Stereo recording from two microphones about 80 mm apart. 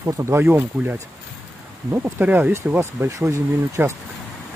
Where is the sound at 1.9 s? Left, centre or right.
Right.